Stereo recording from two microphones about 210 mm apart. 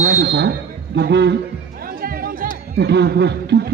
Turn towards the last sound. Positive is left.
turn(degrees=-55)  # may be behind; listen again after turning